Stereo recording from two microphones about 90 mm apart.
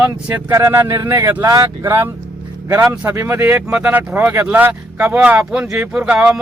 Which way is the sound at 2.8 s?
15° right (ahead or behind).